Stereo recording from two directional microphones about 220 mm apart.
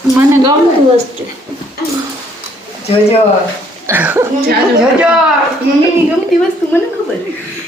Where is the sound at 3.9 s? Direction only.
10° right (ahead or behind).